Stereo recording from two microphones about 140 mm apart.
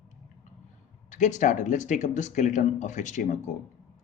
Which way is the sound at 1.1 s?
60° left (ahead or behind).